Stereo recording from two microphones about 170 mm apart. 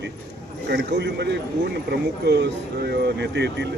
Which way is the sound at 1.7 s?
80° right.